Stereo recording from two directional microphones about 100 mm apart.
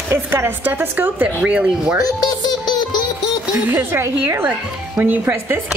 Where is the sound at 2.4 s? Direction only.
45° left (ahead or behind).